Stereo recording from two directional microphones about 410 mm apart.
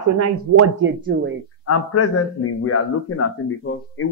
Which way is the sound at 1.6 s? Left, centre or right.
Left.